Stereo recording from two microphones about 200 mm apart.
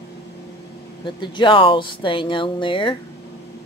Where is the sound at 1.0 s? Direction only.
25° left (ahead or behind).